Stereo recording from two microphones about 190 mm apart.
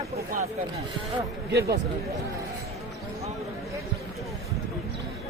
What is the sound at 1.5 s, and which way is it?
Speech, 60° right (ahead or behind).